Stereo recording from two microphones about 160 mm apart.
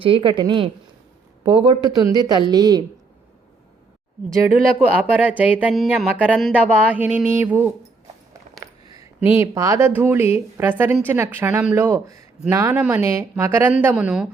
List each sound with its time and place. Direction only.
0.0 s a woman's voice: 30° right (ahead or behind)
4.8 s speech: 10° right (ahead or behind)
5.7 s speech: centre (ahead or behind); by 7.7 s 15° right (ahead or behind)
8.5 s a sound: 50° right (ahead or behind)
8.9 s speech: 20° right (ahead or behind); by 14.3 s 5° right (ahead or behind)